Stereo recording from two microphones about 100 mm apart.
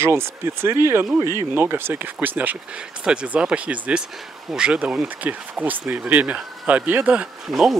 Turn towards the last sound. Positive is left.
turn(degrees=0)  # may be behind; listen again after turning